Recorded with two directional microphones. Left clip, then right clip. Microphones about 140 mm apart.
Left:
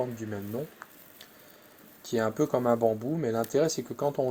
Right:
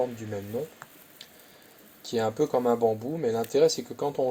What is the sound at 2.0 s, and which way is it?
Speech, 55° left (ahead or behind).